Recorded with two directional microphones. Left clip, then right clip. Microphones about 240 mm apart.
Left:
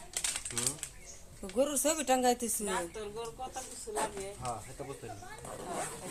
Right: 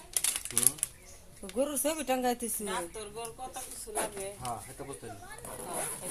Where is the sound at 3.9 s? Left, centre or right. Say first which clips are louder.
Even; right.